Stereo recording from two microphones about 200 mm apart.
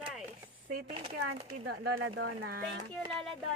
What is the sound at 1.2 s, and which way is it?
Speech, 90° right.